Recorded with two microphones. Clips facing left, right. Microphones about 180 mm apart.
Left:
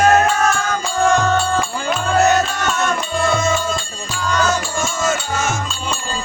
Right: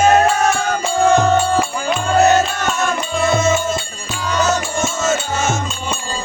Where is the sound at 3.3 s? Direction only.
20° right (ahead or behind).